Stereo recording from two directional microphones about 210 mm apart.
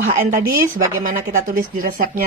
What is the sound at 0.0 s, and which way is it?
Speech, 45° right (ahead or behind).